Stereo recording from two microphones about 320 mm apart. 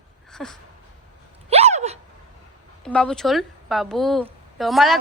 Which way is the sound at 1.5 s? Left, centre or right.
Centre.